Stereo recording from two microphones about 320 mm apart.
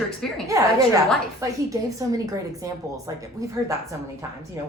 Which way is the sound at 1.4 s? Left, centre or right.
Centre.